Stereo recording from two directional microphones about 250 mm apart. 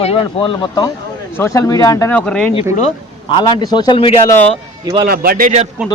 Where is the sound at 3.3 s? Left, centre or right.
Centre.